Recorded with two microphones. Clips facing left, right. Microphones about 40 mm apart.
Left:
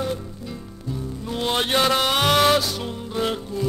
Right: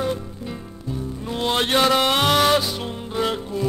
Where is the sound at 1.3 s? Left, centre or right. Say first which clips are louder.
Right 1 dB; centre.